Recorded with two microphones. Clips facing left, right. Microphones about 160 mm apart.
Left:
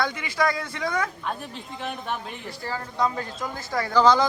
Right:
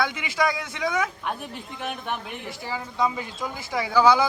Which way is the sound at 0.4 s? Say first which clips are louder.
Even; centre (ahead or behind).